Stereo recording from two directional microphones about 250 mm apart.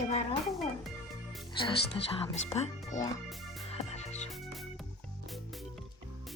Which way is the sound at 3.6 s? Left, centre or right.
Left.